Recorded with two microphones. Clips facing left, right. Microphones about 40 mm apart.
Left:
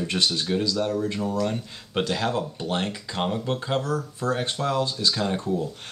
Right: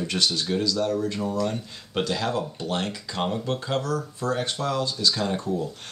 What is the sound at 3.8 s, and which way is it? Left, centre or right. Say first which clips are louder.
Speech: left 1 dB; left.